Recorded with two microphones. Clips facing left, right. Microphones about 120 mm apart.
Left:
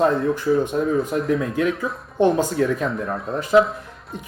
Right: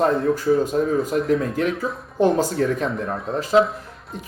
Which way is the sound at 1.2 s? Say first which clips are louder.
Even; 45° right (ahead or behind).